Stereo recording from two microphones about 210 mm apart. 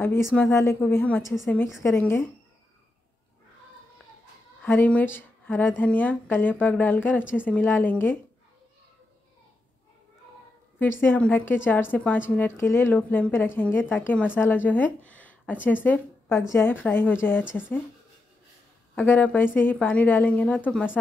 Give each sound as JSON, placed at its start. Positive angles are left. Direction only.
{"t": 0.0, "sound": "speech", "side_deg": 10}
{"t": 4.6, "sound": "speech", "side_deg": 10}
{"t": 11.0, "sound": "speech", "side_deg": 10}
{"t": 15.0, "sound": "a sound", "side_deg": 5}
{"t": 15.6, "sound": "speech", "side_deg": 10}
{"t": 18.9, "sound": "speech", "side_deg": 10}